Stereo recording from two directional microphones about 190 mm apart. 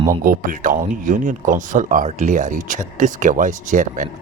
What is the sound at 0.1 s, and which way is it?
Speech, 45° right (ahead or behind).